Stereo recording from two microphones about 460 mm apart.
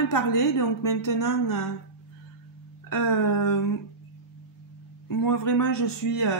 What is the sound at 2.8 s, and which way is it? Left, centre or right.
Speech, left.